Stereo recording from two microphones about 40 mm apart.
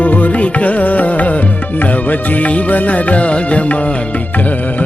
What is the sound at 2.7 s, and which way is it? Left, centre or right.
Music, left.